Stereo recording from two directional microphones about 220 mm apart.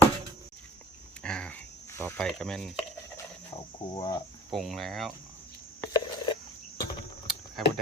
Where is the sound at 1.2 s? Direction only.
5° left (ahead or behind).